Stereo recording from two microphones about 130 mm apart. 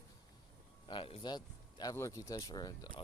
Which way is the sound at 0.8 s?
40° left (ahead or behind).